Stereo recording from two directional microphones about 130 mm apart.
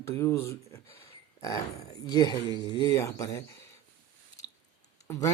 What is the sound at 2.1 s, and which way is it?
Speech, 30° left (ahead or behind).